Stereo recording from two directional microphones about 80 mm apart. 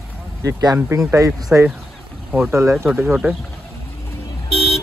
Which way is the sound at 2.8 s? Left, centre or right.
Centre.